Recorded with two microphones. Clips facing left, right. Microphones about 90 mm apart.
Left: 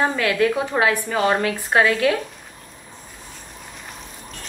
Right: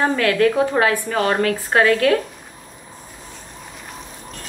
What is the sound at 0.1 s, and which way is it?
A woman's voice, 15° left (ahead or behind).